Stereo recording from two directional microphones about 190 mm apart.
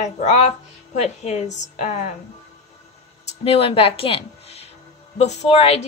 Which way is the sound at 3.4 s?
30° left (ahead or behind).